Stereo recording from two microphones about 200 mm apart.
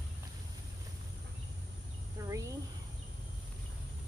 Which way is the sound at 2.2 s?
15° right (ahead or behind).